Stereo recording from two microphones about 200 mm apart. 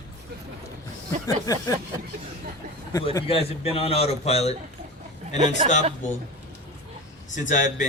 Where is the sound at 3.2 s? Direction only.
30° left (ahead or behind).